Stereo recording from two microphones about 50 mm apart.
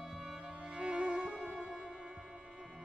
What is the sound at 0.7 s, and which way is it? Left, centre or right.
Music, centre.